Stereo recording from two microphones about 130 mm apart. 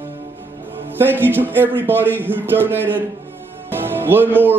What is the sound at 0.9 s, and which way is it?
Speech, 15° right (ahead or behind).